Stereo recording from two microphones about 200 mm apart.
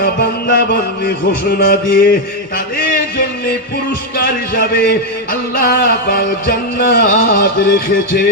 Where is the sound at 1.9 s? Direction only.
45° left (ahead or behind).